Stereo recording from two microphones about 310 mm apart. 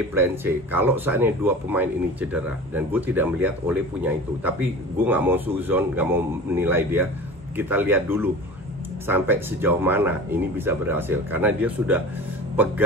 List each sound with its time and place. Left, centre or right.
0.1 s speech: centre